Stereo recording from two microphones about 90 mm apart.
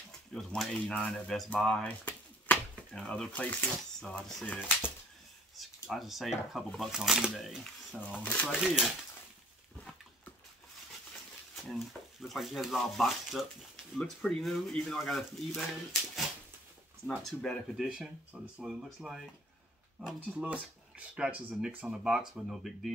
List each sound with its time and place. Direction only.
0.3 s speech: 5° left (ahead or behind)
2.9 s speech: 5° left (ahead or behind)
4.1 s speech: 5° left (ahead or behind)
5.6 s speech: centre (ahead or behind)
8.2 s speech: 15° left (ahead or behind)
8.5 s speech: 10° right (ahead or behind)
11.5 s speech: centre (ahead or behind)
17.7 s speech: 5° right (ahead or behind)
19.0 s speech: 15° right (ahead or behind)